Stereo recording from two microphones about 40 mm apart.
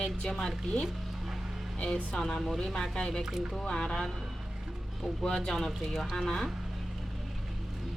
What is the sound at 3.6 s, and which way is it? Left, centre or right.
Speech, centre.